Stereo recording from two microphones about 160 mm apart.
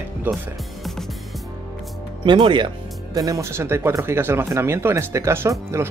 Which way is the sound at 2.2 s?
30° right (ahead or behind).